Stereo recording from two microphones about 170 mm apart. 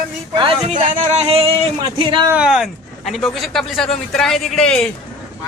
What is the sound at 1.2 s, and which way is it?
Speech, 30° right (ahead or behind).